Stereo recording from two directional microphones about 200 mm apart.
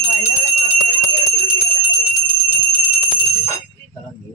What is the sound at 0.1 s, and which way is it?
Jingle bell, 35° left (ahead or behind).